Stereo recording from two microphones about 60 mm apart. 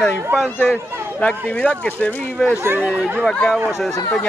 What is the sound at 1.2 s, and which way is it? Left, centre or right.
Speech, left.